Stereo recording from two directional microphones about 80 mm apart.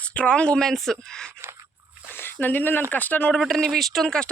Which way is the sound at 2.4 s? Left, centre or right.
Left.